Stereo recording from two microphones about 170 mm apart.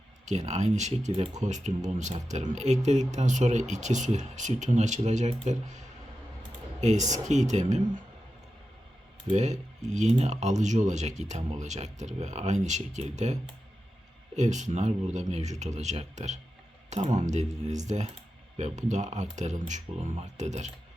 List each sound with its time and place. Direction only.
0.3 s speech: 45° right (ahead or behind)
9.3 s speech: 45° right (ahead or behind)
14.3 s speech: 45° right (ahead or behind)